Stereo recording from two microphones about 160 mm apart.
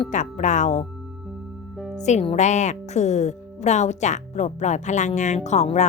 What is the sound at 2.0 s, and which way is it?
Speech, 45° left (ahead or behind).